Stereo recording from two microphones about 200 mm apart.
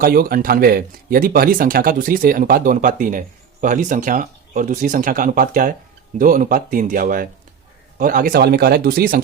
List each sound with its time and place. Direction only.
0.0 s speech: 45° right (ahead or behind)